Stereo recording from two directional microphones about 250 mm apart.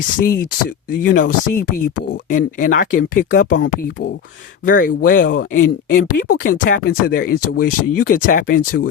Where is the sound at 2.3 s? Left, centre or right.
Left.